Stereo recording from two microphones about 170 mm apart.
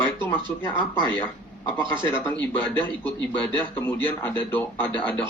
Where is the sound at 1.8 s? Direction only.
30° right (ahead or behind).